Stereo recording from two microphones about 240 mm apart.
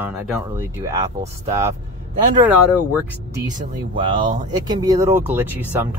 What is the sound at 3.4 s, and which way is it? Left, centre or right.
Speech, centre.